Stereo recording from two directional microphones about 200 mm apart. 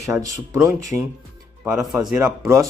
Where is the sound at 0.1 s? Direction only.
15° right (ahead or behind).